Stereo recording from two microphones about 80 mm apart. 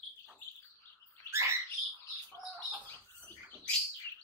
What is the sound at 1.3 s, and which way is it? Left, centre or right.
Rodents, right.